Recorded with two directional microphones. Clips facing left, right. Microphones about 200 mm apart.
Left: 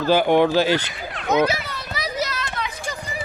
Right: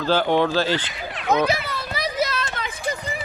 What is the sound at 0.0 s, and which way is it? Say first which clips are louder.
Speech: left 3 dB; 15° left (ahead or behind).